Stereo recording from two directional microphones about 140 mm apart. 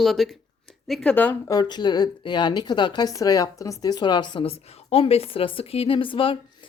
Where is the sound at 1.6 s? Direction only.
30° left (ahead or behind).